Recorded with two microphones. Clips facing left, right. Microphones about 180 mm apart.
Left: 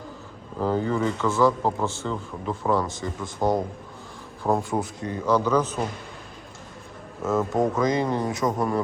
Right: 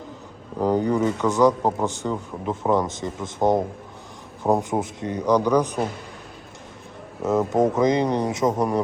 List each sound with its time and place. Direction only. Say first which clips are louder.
0.6 s a man's voice: right 3 dB; 15° right (ahead or behind)
7.2 s speech: right 3 dB; 20° right (ahead or behind)